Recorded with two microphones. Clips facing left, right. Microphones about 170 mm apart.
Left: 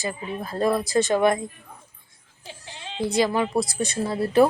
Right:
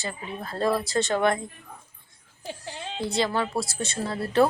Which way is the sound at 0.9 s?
15° left (ahead or behind).